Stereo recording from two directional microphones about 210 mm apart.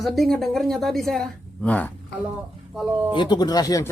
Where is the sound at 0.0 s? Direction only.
Centre (ahead or behind).